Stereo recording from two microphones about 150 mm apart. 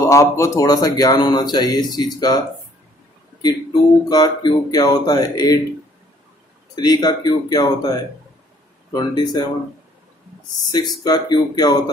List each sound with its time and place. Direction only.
0.1 s speech: 20° left (ahead or behind)
4.1 s speech: 25° left (ahead or behind)
6.7 s speech: 25° left (ahead or behind)
10.7 s speech: 30° left (ahead or behind)